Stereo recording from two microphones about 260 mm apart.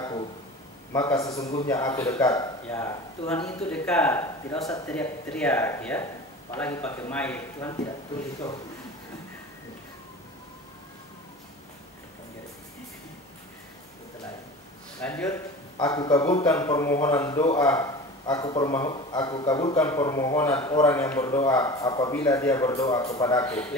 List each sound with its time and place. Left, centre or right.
0.0 s a sound: centre
0.9 s a man's voice: centre
15.0 s a man's voice: centre